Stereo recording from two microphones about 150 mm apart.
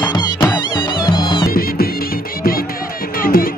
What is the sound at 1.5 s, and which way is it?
Music, 80° left.